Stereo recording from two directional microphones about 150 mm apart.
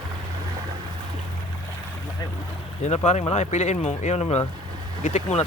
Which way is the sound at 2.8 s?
45° left (ahead or behind).